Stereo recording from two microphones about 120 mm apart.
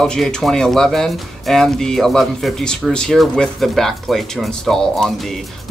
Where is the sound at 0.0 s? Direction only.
5° left (ahead or behind).